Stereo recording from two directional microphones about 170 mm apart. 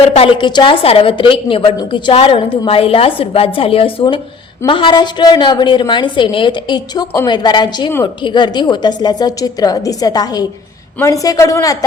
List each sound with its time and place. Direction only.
0.1 s a woman's voice: 35° left (ahead or behind)